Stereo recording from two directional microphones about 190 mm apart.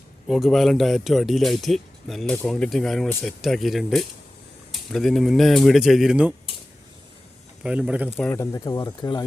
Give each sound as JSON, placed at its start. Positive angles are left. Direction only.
{"t": 0.3, "sound": "speech", "side_deg": 0}
{"t": 7.6, "sound": "speech", "side_deg": -5}
{"t": 8.2, "sound": "speech", "side_deg": 15}